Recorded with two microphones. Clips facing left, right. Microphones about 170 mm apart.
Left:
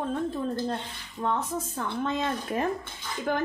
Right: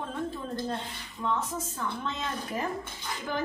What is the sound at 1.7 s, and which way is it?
Speech, 50° left (ahead or behind).